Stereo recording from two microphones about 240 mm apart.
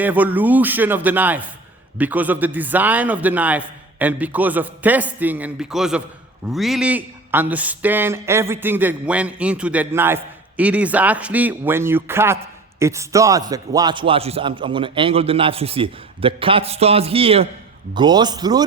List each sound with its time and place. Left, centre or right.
0.0 s a man's voice: centre